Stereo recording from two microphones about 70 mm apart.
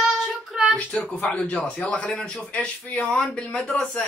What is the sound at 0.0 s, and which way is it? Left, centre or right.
Child singing, centre.